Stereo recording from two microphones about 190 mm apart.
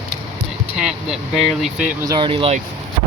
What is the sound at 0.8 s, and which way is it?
Speech, 5° right (ahead or behind).